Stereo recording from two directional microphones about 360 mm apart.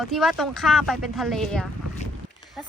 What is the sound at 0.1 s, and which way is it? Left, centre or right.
Speech, centre.